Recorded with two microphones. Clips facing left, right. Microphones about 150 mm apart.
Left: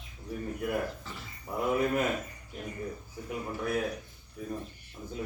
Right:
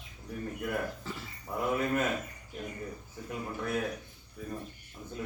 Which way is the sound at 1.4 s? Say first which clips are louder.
Left 2 dB; 10° left (ahead or behind).